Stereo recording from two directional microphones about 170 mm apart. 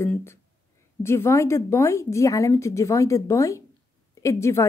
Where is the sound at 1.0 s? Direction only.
15° left (ahead or behind).